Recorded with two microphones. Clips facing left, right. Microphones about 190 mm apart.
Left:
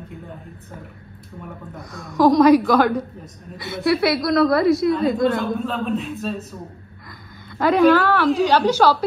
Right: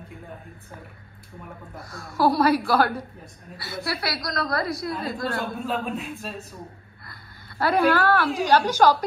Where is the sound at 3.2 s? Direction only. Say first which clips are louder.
Left 6 dB; 20° left (ahead or behind).